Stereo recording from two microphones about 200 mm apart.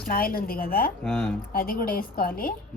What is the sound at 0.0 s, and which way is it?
A woman's voice, 45° left (ahead or behind).